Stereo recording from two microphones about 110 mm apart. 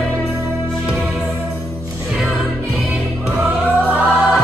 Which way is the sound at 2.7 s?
5° right (ahead or behind).